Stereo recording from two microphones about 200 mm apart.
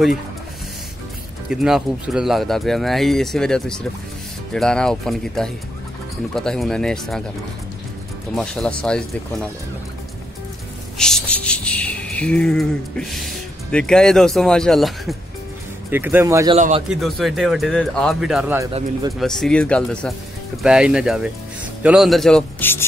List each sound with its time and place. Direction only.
1.5 s speech: 5° right (ahead or behind)
8.4 s speech: 5° left (ahead or behind)
11.0 s speech: 5° left (ahead or behind)
15.9 s speech: 10° right (ahead or behind)
16.5 s a man's voice: 35° right (ahead or behind)
16.9 s speech: centre (ahead or behind)